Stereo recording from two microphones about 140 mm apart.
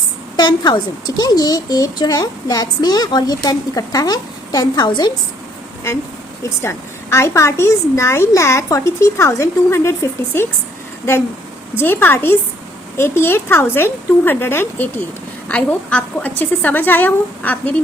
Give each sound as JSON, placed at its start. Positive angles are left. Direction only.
{"t": 0.3, "sound": "a child's voice", "side_deg": 30}
{"t": 6.6, "sound": "a child's voice", "side_deg": 20}
{"t": 11.8, "sound": "speech", "side_deg": 15}